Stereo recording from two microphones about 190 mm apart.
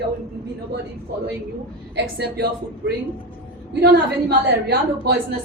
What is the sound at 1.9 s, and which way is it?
Speech, 60° right (ahead or behind).